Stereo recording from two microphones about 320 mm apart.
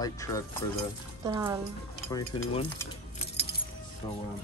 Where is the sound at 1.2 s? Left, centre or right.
Centre.